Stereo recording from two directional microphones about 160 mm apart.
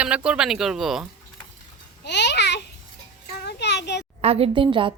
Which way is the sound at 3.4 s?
90° left.